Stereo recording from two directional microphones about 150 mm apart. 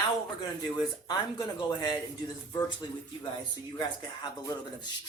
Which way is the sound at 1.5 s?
30° left (ahead or behind).